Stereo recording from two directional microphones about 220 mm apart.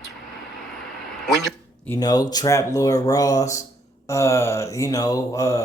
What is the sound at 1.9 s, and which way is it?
Mantra, 15° left (ahead or behind).